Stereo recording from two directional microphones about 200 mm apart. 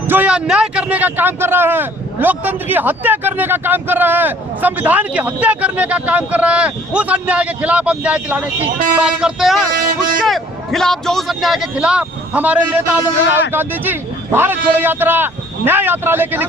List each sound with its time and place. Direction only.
0.1 s speech: 5° right (ahead or behind)
8.6 s speech: 40° right (ahead or behind)
9.0 s a man's voice: 5° right (ahead or behind)